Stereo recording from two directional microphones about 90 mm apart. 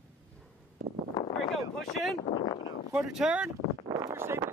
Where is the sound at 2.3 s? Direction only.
55° left (ahead or behind).